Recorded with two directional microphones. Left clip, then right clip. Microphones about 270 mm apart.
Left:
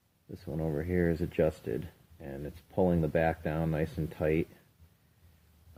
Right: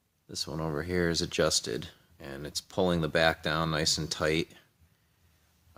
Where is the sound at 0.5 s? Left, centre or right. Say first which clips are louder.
Even; centre.